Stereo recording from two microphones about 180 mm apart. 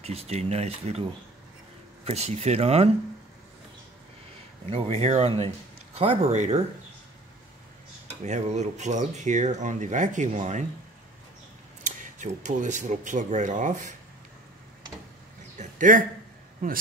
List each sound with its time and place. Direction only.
0.0 s speech: 35° right (ahead or behind)
2.0 s speech: 35° right (ahead or behind)
4.6 s speech: 35° right (ahead or behind)
8.1 s speech: 40° right (ahead or behind)
12.2 s speech: 40° right (ahead or behind)
15.5 s a sound: 45° right (ahead or behind)
16.6 s speech: 50° right (ahead or behind)